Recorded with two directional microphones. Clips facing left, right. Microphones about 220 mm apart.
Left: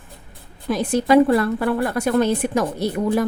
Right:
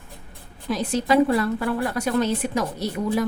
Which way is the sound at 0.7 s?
50° left (ahead or behind).